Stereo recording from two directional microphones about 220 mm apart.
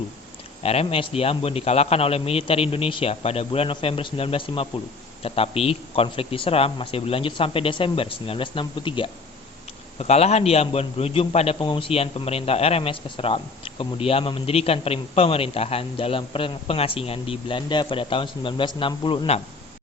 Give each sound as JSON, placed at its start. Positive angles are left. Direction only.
{"t": 0.6, "sound": "a man's voice", "side_deg": 25}